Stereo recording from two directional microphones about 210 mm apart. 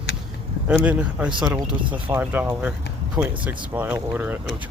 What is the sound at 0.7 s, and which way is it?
Speech, 5° right (ahead or behind).